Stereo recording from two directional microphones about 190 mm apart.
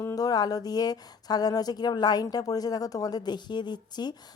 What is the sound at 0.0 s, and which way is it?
Speech, 15° left (ahead or behind).